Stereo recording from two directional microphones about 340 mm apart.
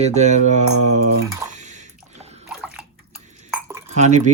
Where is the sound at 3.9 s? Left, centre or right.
Right.